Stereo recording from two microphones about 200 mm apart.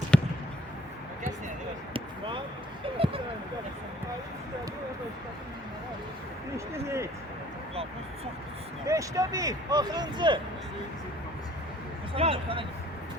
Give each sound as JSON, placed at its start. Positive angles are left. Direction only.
{"t": 0.1, "sound": "basketball bounce", "side_deg": 5}
{"t": 1.9, "sound": "basketball bounce", "side_deg": -25}
{"t": 3.0, "sound": "a sound", "side_deg": -30}
{"t": 6.7, "sound": "speech", "side_deg": -15}
{"t": 8.9, "sound": "speech", "side_deg": -15}
{"t": 12.1, "sound": "speech", "side_deg": -25}